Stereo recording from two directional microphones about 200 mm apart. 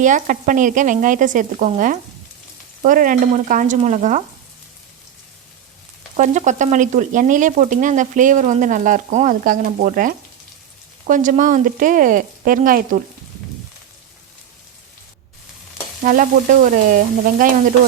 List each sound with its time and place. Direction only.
0.0 s speech: 40° right (ahead or behind)
6.1 s speech: 40° right (ahead or behind)
16.0 s frying: 40° right (ahead or behind)